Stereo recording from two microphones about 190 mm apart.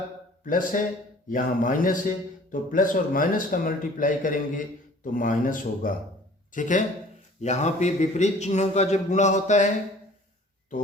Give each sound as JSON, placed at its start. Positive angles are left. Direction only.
{"t": 0.4, "sound": "a man's voice", "side_deg": 45}